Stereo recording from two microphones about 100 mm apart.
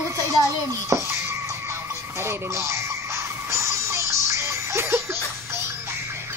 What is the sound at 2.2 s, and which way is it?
Speech, 30° right (ahead or behind).